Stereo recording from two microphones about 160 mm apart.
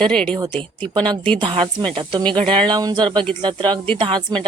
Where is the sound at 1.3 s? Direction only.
30° right (ahead or behind).